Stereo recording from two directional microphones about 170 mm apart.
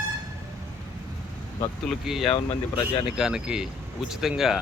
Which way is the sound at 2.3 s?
30° left (ahead or behind).